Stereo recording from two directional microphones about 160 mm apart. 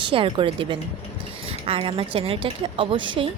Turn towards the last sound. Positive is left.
turn(degrees=-30)  # may be behind; listen again after turning